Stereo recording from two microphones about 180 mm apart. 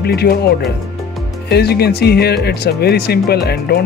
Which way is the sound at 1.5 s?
65° left (ahead or behind).